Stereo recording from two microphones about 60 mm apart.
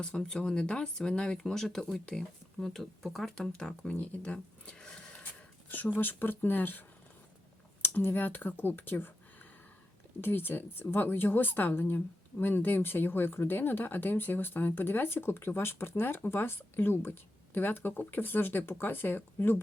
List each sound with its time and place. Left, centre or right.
0.0 s speech: centre
3.9 s a sound: left
6.0 s speech: left